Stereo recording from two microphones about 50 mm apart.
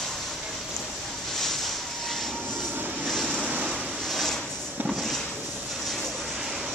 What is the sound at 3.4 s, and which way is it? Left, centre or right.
Vehicle, right.